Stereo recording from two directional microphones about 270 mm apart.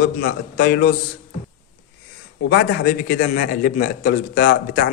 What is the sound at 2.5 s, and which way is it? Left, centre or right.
Speech, left.